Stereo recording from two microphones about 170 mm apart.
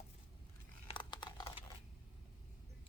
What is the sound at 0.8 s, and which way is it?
Computer keyboard, 30° left (ahead or behind).